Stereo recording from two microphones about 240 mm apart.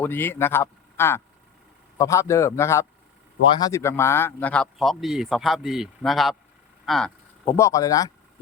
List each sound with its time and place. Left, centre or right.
0.0 s a man's voice: centre